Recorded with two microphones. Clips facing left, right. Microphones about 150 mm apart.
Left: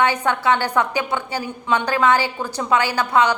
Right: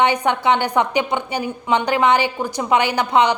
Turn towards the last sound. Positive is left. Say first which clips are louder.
# right 2 dB
turn(degrees=-20)  # may be behind; listen again after turning